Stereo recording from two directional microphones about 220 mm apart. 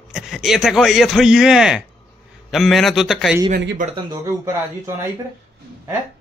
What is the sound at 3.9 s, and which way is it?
Speech, 15° right (ahead or behind).